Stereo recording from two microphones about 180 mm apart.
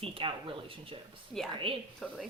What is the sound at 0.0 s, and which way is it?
A woman's voice, 30° right (ahead or behind).